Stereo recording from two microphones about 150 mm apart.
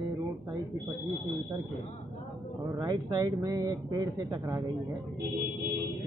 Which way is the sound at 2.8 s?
30° right (ahead or behind).